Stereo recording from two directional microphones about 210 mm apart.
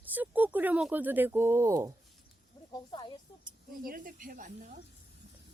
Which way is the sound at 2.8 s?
20° left (ahead or behind).